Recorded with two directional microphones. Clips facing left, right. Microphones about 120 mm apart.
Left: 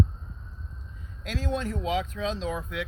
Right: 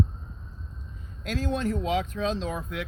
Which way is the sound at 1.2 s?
45° right (ahead or behind).